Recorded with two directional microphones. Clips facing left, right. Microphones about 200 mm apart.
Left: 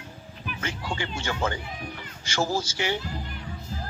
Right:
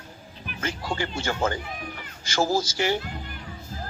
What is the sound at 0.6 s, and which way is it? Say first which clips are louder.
Speech: right 3 dB; 40° right (ahead or behind).